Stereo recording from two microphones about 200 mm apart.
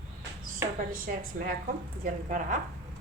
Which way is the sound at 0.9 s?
45° right (ahead or behind).